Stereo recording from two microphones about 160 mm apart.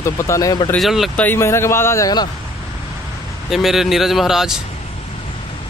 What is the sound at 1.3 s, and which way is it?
Speech, 15° left (ahead or behind).